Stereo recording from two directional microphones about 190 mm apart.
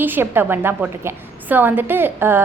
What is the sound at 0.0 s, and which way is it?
A woman's voice, 10° right (ahead or behind).